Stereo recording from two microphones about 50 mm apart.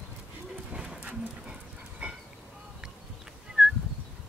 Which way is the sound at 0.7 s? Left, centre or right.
Centre.